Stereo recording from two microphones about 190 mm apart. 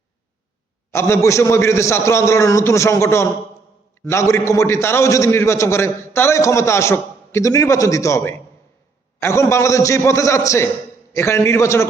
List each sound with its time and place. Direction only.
0.9 s a man's voice: 15° left (ahead or behind)